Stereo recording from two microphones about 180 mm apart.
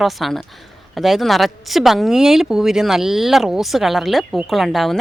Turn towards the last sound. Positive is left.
turn(degrees=0)  # may be behind; listen again after turning